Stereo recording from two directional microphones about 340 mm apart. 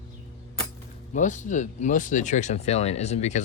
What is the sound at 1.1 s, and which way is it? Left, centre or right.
Speech, left.